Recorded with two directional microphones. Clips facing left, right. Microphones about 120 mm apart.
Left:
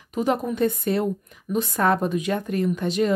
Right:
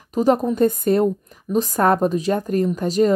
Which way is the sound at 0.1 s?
40° right (ahead or behind).